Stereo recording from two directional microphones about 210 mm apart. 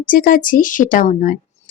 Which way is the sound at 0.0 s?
40° left (ahead or behind).